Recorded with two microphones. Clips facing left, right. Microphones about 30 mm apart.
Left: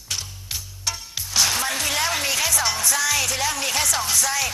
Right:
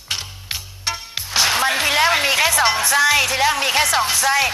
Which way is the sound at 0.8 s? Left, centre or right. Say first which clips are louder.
Right 3 dB; right.